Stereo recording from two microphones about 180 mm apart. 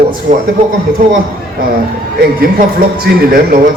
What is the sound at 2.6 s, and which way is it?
Speech, 55° right (ahead or behind).